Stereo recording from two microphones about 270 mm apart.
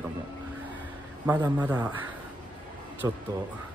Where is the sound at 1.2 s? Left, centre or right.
Centre.